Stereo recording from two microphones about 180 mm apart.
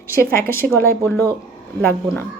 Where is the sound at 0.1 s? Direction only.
15° left (ahead or behind).